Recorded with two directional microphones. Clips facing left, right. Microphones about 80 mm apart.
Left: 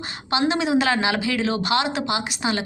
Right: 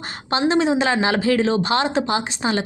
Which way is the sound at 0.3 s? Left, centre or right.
Right.